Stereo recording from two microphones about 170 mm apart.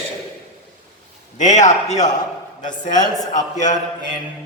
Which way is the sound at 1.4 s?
45° left (ahead or behind).